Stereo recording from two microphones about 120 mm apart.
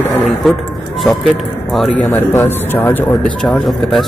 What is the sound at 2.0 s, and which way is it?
A man's voice, 15° left (ahead or behind).